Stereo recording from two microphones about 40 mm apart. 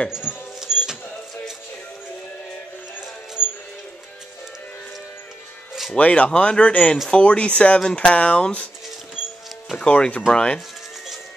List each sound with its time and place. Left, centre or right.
0.1 s music: centre
5.9 s speech: left
9.8 s speech: left